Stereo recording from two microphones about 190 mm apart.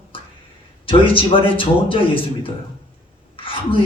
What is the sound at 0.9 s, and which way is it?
A man's voice, 30° left (ahead or behind).